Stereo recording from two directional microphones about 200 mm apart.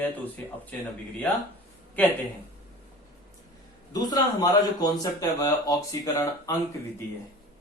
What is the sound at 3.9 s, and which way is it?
Speech, 20° left (ahead or behind).